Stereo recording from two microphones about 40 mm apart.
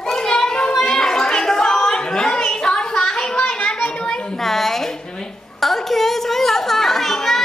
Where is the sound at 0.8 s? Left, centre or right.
Centre.